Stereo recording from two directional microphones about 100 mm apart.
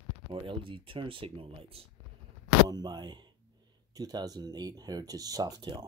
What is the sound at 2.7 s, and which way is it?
Speech, 45° right (ahead or behind).